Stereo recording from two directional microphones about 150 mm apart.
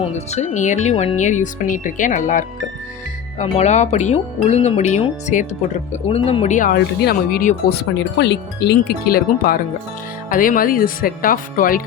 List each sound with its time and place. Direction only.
0.0 s speech: 45° left (ahead or behind)
3.3 s speech: 45° left (ahead or behind)
6.1 s speech: 40° left (ahead or behind); by 7.9 s 80° left
8.6 s wind chime: 85° left
10.2 s speech: 65° left (ahead or behind)